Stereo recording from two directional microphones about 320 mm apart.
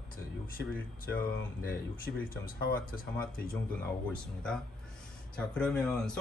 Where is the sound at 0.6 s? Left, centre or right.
Left.